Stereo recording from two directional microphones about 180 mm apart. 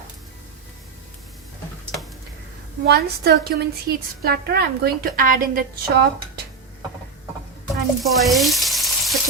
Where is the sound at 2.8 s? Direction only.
60° right (ahead or behind).